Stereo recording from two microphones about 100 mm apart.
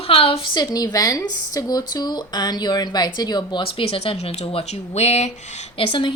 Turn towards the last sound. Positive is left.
turn(degrees=60)  # may be behind; listen again after turning